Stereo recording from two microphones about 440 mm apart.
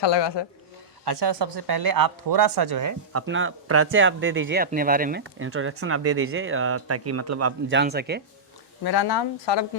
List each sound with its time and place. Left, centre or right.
0.0 s speech: left
1.0 s speech: right
3.1 s speech: right
8.8 s speech: left